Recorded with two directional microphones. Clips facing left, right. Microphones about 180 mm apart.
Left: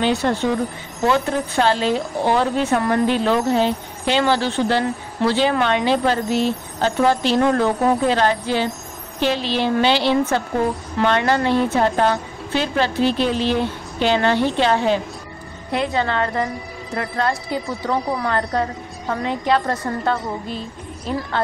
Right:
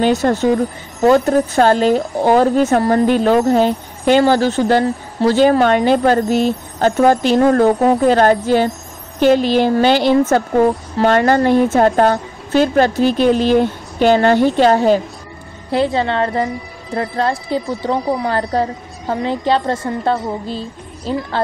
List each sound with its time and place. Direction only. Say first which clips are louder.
0.0 s a woman's voice: right 5 dB; 45° right (ahead or behind)
15.7 s a woman's voice: right 5 dB; 30° right (ahead or behind)
18.1 s a woman's voice: right 4 dB; 25° right (ahead or behind)